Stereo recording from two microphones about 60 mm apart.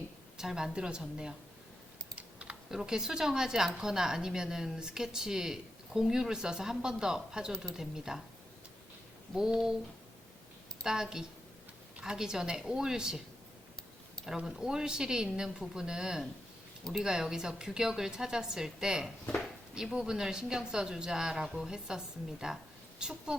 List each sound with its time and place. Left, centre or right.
0.3 s speech: centre
2.1 s typing: centre
2.7 s speech: centre
9.3 s speech: centre
10.8 s speech: centre
14.3 s speech: centre